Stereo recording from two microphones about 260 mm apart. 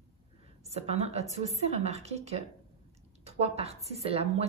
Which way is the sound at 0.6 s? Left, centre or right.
Right.